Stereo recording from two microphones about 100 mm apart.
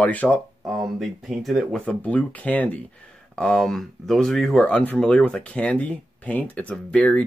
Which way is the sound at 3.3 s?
5° left (ahead or behind).